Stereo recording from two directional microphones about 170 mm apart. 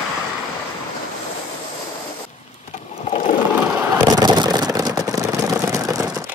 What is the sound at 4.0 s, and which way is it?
Vehicle, 20° right (ahead or behind).